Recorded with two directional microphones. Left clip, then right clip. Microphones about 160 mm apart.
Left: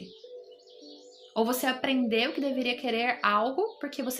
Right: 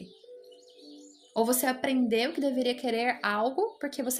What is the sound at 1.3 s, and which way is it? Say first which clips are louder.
A woman's voice: even; 50° right (ahead or behind).